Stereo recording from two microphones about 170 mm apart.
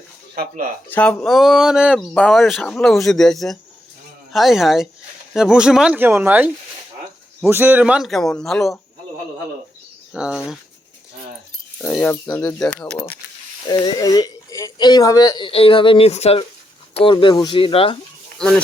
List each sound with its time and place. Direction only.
0.9 s speech: 10° left (ahead or behind); by 6.5 s 10° right (ahead or behind)
7.5 s speech: 10° right (ahead or behind)
10.1 s speech: 5° right (ahead or behind)
11.8 s speech: 5° left (ahead or behind)
13.7 s speech: 25° left (ahead or behind)